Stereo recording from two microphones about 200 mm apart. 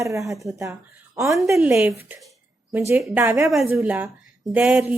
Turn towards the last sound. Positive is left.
turn(degrees=-5)  # may be behind; listen again after turning